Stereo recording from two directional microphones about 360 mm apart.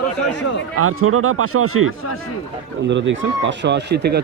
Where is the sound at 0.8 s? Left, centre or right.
Right.